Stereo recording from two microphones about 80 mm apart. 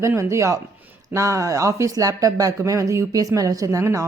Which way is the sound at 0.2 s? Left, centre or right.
Right.